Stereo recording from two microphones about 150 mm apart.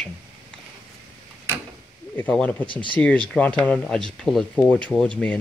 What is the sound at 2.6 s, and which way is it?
Speech, 35° left (ahead or behind).